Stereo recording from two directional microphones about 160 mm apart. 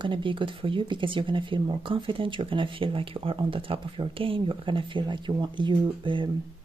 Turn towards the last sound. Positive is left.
turn(degrees=-30)  # may be behind; listen again after turning